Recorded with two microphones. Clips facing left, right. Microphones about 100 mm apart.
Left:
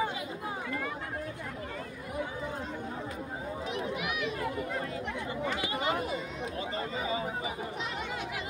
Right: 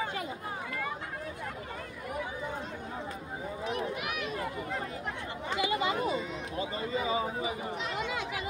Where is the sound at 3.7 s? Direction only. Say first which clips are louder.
Right 1 dB; 45° right (ahead or behind).